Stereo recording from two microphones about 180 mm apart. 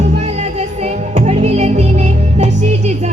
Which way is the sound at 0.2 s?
40° right (ahead or behind).